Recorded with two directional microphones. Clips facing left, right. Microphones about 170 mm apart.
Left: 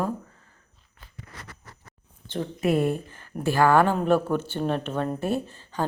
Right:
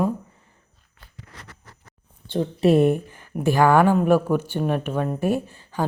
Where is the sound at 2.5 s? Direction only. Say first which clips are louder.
Right 6 dB; 25° right (ahead or behind).